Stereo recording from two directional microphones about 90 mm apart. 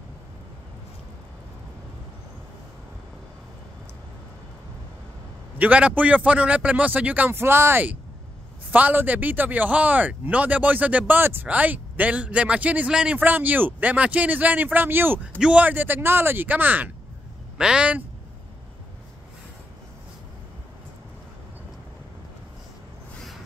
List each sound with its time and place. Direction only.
5.6 s speech: 15° right (ahead or behind)